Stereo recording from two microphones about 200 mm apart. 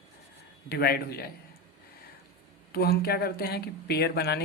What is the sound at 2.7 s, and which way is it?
A man's voice, 50° left (ahead or behind).